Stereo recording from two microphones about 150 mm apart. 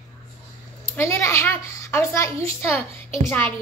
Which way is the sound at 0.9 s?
20° left (ahead or behind).